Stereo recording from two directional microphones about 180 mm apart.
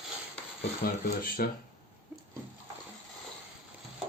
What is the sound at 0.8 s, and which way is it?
Speech, 50° left (ahead or behind).